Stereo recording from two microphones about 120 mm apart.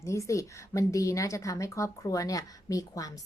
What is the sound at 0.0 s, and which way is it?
A woman's voice, 25° left (ahead or behind).